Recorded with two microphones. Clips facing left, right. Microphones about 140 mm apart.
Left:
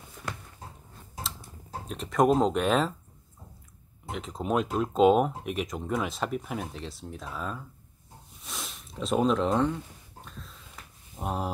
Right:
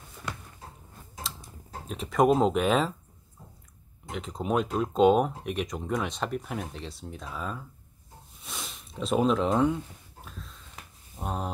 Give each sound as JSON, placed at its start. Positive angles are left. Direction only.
{"t": 1.9, "sound": "speech", "side_deg": 0}
{"t": 4.1, "sound": "speech", "side_deg": 0}
{"t": 8.4, "sound": "snort", "side_deg": 0}
{"t": 10.2, "sound": "a sound", "side_deg": 0}